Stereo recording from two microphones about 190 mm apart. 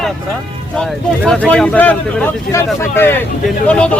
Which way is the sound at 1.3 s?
5° left (ahead or behind).